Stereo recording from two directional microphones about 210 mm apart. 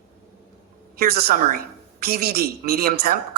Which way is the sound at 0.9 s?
45° right (ahead or behind).